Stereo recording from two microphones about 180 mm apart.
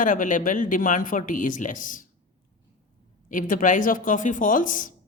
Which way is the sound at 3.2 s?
45° left (ahead or behind).